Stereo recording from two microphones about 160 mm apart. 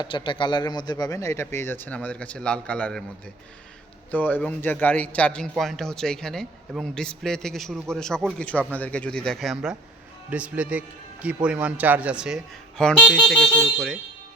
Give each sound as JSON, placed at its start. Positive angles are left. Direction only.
{"t": 0.0, "sound": "speech", "side_deg": 30}
{"t": 4.1, "sound": "a man's voice", "side_deg": 10}